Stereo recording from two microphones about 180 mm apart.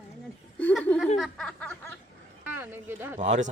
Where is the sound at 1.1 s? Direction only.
Centre (ahead or behind).